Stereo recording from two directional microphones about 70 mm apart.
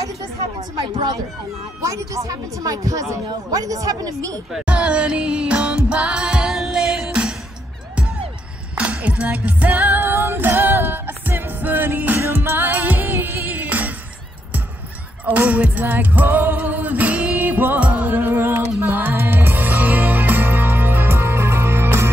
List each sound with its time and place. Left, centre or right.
0.9 s speech: right
1.8 s a woman's voice: right
4.6 s music: centre
8.7 s music: centre
15.2 s music: right